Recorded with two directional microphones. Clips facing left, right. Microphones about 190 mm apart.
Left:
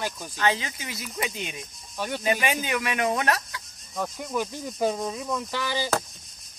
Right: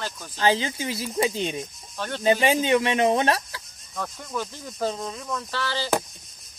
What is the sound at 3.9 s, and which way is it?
Speech, 15° left (ahead or behind).